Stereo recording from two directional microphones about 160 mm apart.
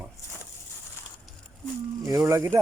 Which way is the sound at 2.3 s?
20° right (ahead or behind).